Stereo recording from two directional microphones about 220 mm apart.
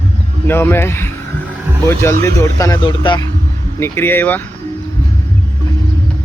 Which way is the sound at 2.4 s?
15° left (ahead or behind).